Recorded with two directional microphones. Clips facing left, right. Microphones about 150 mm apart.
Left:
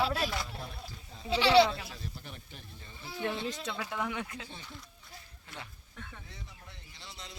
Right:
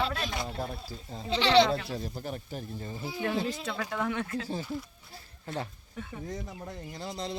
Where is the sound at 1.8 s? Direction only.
40° right (ahead or behind).